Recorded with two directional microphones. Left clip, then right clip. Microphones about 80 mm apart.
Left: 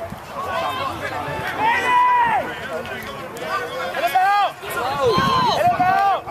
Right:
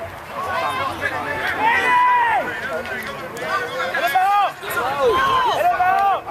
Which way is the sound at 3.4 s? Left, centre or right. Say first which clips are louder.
Right 2 dB; centre.